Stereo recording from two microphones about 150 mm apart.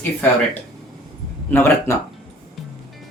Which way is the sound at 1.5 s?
15° left (ahead or behind).